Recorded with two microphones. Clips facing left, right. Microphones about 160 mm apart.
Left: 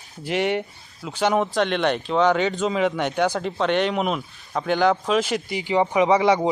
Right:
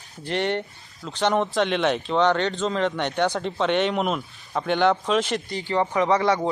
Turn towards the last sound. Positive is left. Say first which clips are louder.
# left 3 dB
turn(degrees=15)  # may be behind; listen again after turning